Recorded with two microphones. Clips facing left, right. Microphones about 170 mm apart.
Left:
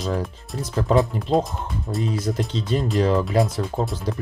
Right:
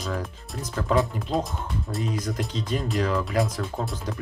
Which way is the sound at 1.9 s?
Centre (ahead or behind).